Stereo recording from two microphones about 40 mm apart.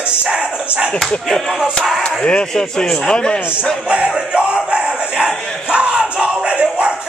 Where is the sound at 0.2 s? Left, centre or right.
Right.